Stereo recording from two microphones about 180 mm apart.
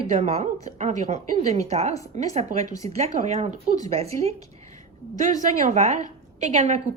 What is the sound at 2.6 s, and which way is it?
Speech, 20° left (ahead or behind).